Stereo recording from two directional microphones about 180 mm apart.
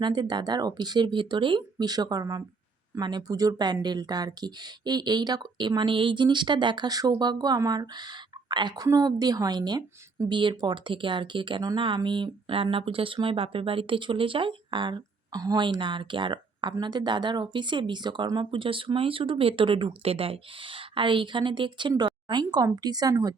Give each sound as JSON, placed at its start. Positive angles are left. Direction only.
{"t": 0.0, "sound": "speech", "side_deg": -25}